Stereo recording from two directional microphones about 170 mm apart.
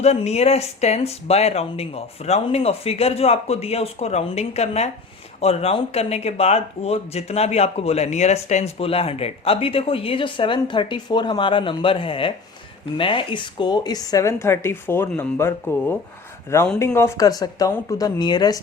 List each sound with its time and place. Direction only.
0.0 s speech: 40° left (ahead or behind); by 18.6 s 25° left (ahead or behind)